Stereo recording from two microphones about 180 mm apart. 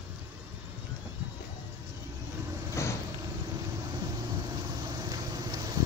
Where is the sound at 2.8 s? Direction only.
15° left (ahead or behind).